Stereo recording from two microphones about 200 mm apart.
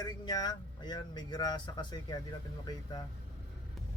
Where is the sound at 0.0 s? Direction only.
20° left (ahead or behind).